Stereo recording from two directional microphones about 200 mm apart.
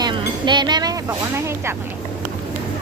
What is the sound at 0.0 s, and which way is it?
Chink, 25° right (ahead or behind).